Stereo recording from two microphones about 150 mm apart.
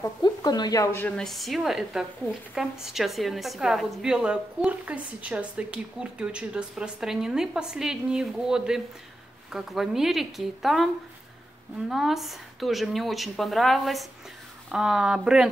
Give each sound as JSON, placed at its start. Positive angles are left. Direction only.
{"t": 0.0, "sound": "speech", "side_deg": 25}
{"t": 1.0, "sound": "a woman's voice", "side_deg": 5}
{"t": 11.9, "sound": "a woman's voice", "side_deg": 0}